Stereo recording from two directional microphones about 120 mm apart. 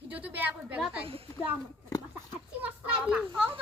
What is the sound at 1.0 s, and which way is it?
Speech, 50° right (ahead or behind).